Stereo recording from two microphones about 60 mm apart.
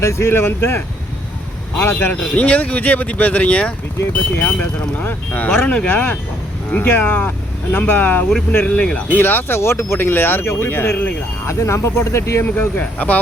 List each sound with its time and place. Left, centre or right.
0.0 s speech: left
2.0 s speech: left
9.1 s speech: left
11.4 s speech: left
12.5 s speech: left